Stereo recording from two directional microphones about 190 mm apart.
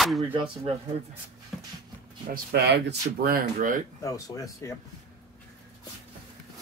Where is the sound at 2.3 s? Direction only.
60° right (ahead or behind).